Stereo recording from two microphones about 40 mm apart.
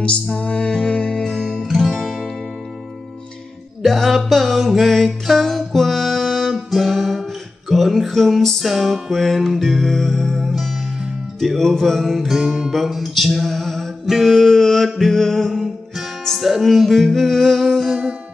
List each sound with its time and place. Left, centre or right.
0.0 s music: left
1.1 s music: centre
1.8 s music: centre
3.8 s music: centre
14.3 s a sound: centre
16.3 s music: centre